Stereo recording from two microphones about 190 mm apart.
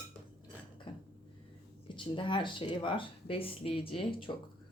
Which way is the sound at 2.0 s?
25° left (ahead or behind).